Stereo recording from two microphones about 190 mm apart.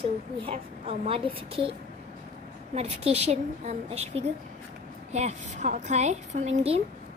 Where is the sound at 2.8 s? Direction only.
35° right (ahead or behind).